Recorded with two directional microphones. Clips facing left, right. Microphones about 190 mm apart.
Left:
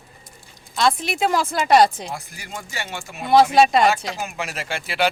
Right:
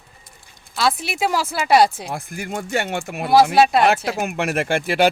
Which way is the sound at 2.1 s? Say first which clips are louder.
Right 6 dB; 55° right (ahead or behind).